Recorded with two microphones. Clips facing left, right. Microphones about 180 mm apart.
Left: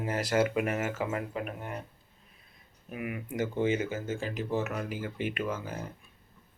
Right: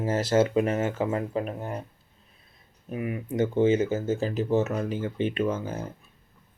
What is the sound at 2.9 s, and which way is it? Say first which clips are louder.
Speech: right 6 dB; 30° right (ahead or behind).